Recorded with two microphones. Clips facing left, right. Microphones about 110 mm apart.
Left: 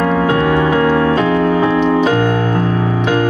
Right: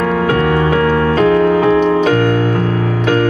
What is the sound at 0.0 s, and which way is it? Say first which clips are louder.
Music: even; 30° left (ahead or behind).